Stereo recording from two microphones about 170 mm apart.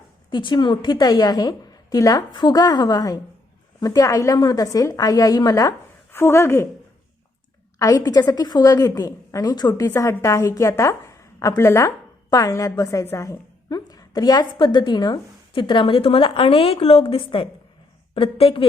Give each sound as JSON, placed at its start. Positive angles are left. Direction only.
{"t": 0.3, "sound": "a woman's voice", "side_deg": 25}
{"t": 7.8, "sound": "a woman's voice", "side_deg": 20}